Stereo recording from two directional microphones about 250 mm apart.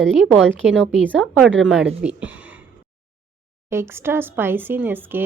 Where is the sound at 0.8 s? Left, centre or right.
Centre.